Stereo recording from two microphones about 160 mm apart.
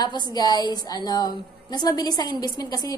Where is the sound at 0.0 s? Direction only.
25° left (ahead or behind).